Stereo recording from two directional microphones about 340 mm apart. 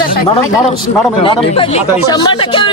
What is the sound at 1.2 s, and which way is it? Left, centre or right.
Speech, centre.